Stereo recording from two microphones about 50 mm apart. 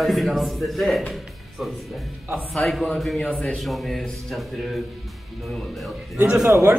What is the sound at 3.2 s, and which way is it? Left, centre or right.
Speech, left.